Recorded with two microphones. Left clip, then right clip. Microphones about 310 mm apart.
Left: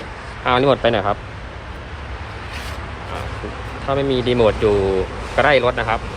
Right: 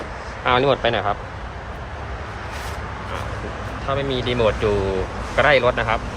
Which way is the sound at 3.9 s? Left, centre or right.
Centre.